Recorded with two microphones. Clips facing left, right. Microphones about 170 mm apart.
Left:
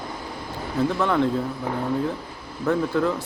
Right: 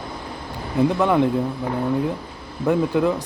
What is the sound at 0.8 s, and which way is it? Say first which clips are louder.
Speech: right 4 dB; 15° right (ahead or behind).